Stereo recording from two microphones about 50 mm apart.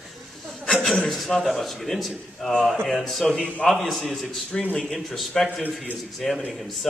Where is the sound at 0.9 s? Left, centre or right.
Centre.